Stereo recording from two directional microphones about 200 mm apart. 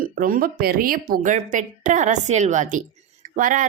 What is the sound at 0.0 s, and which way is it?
A woman's voice, 45° right (ahead or behind).